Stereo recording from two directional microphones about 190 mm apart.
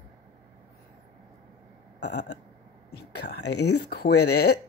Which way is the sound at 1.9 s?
60° left (ahead or behind).